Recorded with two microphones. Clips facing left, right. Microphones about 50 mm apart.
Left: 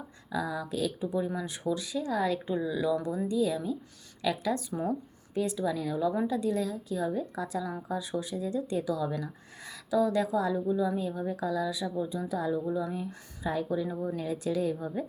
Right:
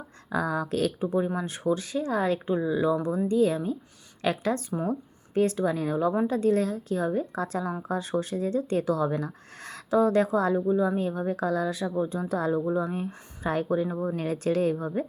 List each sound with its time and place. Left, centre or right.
0.3 s speech: right
2.6 s speech: right
12.8 s speech: right